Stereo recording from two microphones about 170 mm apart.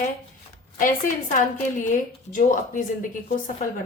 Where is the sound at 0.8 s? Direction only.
50° left (ahead or behind).